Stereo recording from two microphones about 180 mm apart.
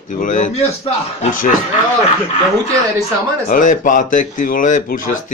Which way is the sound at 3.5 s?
45° left (ahead or behind).